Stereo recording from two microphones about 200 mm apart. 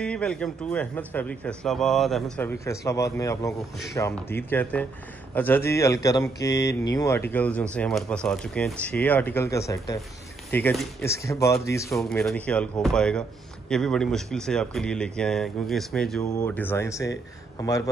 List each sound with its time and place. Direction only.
0.0 s speech: 5° left (ahead or behind)
12.0 s speech: centre (ahead or behind)